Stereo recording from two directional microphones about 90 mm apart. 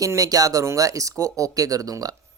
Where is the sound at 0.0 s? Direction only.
40° right (ahead or behind).